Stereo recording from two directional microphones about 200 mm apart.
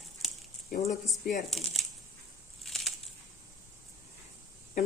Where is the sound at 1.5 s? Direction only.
Centre (ahead or behind).